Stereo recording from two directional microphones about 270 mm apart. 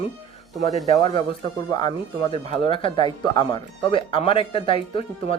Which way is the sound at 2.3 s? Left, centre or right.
Centre.